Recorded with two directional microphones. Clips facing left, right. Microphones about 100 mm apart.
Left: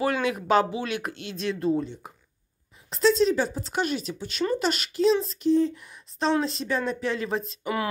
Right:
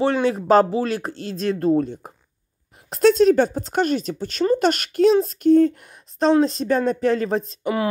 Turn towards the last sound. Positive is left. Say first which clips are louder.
# right 5 dB
turn(degrees=-30)  # may be behind; listen again after turning